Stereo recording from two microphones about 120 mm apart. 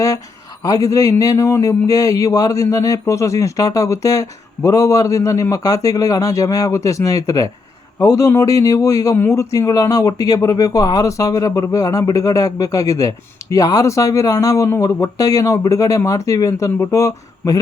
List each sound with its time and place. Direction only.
0.6 s a man's voice: 30° left (ahead or behind)